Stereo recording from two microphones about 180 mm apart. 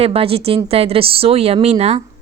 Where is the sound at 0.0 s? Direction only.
35° right (ahead or behind).